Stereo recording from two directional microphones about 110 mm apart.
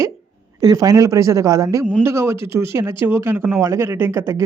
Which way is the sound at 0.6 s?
35° right (ahead or behind).